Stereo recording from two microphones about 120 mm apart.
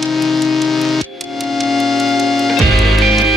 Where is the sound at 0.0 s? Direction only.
Centre (ahead or behind).